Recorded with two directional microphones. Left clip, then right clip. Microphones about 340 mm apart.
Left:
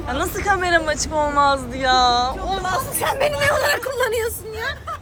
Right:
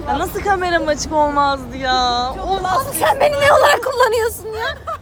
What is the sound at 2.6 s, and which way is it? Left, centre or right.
Speech, right.